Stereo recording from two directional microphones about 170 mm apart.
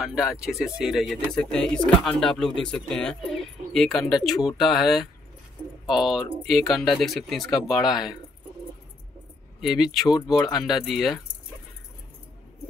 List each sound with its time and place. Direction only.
0.0 s speech: 5° right (ahead or behind)
9.6 s speech: centre (ahead or behind)
10.0 s speech: 20° left (ahead or behind)
10.5 s speech: centre (ahead or behind)